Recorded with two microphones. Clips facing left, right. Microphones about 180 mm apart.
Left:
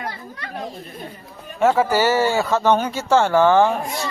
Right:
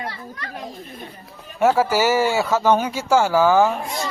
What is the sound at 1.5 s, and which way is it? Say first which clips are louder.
Speech: even; 10° right (ahead or behind).